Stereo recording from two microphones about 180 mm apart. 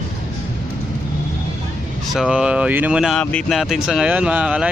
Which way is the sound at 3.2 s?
5° left (ahead or behind).